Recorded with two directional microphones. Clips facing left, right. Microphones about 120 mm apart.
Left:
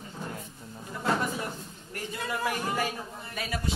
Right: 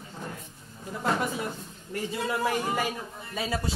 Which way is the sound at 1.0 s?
15° right (ahead or behind).